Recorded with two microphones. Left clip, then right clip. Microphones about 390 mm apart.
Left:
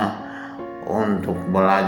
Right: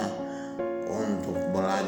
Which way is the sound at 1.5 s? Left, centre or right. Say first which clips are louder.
Left 12 dB; right.